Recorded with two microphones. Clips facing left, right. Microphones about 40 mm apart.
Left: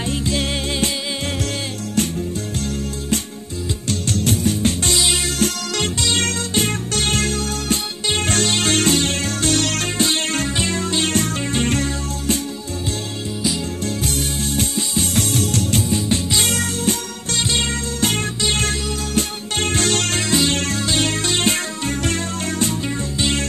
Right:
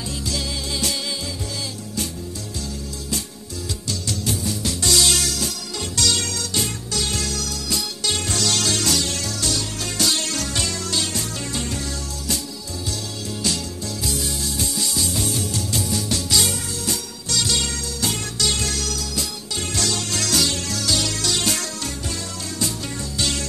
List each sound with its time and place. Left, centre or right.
0.0 s music: left
4.1 s music: left
4.9 s music: left
6.1 s music: left
9.6 s music: left
9.9 s music: left
11.1 s music: left
13.8 s music: left
15.0 s music: left
15.8 s music: left
20.2 s music: left
20.5 s music: left
23.1 s music: left